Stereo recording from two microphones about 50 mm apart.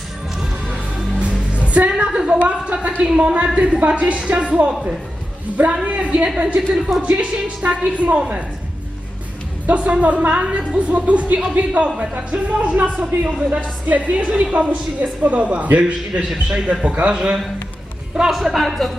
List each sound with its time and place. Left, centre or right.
1.2 s music: right
2.0 s a man's voice: centre
2.5 s a woman's voice: right
5.8 s a woman's voice: right
9.6 s a woman's voice: right
13.2 s a man's voice: centre
13.8 s a woman's voice: right
15.8 s a man's voice: centre
18.2 s speech: centre